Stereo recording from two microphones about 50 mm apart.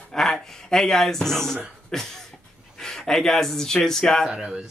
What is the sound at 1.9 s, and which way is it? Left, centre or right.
Cough, centre.